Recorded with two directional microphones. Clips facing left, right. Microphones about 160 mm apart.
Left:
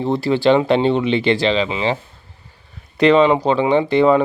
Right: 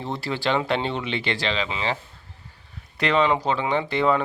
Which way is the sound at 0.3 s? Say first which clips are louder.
Left 9 dB; 20° left (ahead or behind).